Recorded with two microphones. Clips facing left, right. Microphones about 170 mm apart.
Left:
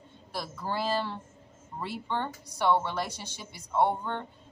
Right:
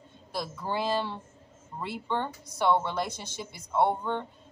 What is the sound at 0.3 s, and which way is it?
A man's voice, 15° right (ahead or behind).